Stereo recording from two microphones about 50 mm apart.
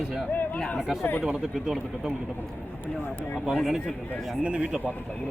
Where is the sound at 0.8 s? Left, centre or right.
Centre.